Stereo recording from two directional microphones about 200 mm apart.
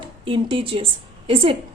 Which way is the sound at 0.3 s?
25° right (ahead or behind).